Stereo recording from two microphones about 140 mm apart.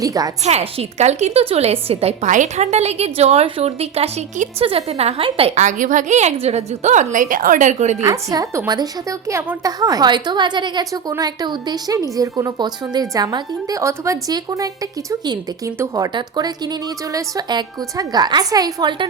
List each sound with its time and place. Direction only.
0.0 s a woman's voice: 25° right (ahead or behind)
0.4 s a woman's voice: 45° right (ahead or behind)
8.0 s a woman's voice: 25° right (ahead or behind)